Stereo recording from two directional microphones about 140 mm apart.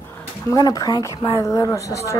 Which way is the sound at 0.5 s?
25° left (ahead or behind).